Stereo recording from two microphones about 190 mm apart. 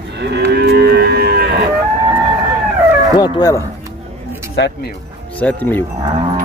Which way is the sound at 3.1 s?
20° left (ahead or behind).